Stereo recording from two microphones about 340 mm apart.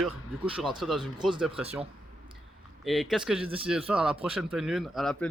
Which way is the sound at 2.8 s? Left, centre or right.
Centre.